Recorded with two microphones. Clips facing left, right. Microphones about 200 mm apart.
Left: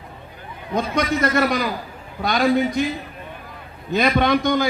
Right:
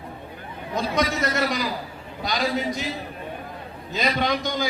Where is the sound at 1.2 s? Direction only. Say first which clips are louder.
Left 5 dB; 55° left (ahead or behind).